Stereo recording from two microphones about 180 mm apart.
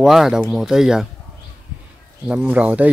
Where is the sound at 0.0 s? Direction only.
Centre (ahead or behind).